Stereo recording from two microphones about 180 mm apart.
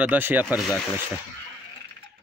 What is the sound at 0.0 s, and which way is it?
Speech, 10° right (ahead or behind).